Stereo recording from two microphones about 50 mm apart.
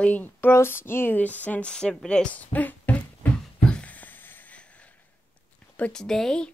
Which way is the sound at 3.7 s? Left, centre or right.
Left.